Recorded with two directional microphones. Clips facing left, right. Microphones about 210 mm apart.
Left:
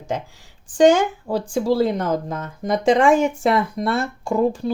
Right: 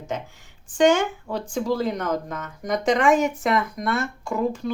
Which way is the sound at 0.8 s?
35° left (ahead or behind).